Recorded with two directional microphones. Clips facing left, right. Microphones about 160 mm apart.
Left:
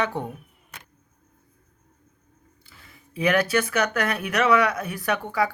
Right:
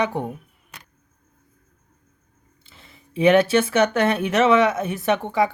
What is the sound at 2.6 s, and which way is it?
Speech, 25° right (ahead or behind).